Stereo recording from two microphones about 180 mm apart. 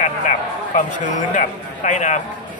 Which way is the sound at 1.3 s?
40° left (ahead or behind).